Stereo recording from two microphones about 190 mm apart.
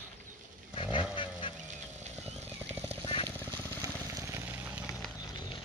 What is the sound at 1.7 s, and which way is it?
Vehicle, 35° right (ahead or behind).